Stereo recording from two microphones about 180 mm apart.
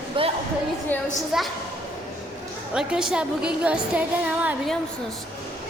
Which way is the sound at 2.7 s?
5° right (ahead or behind).